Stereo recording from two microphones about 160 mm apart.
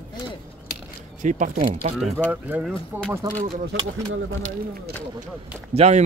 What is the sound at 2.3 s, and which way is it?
Speech, 10° right (ahead or behind).